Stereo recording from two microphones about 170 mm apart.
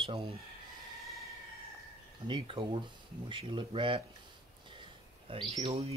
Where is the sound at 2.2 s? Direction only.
30° right (ahead or behind).